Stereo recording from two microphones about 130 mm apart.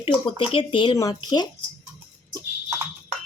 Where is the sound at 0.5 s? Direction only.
40° left (ahead or behind).